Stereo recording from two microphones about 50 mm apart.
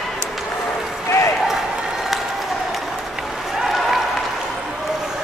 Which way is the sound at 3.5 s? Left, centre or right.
Centre.